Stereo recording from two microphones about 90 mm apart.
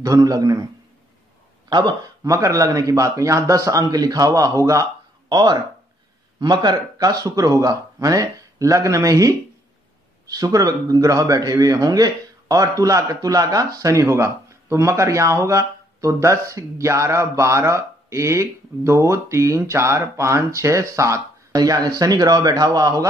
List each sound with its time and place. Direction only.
0.0 s a man's voice: 40° right (ahead or behind)
1.7 s speech: 60° right (ahead or behind)
2.2 s a man's voice: 40° right (ahead or behind)
5.3 s a man's voice: 50° right (ahead or behind); by 21.2 s 35° right (ahead or behind)
21.5 s speech: 45° right (ahead or behind)